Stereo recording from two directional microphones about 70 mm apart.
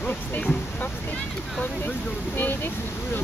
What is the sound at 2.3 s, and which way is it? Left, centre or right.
Speech, left.